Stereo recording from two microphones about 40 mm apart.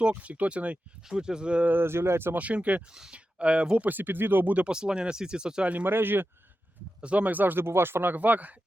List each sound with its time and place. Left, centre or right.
0.1 s speech: right
1.0 s speech: centre
1.6 s speech: right
2.3 s speech: right
3.8 s speech: right
4.7 s speech: centre
5.8 s speech: right
7.0 s speech: right
7.3 s speech: right
7.6 s speech: right
8.1 s speech: right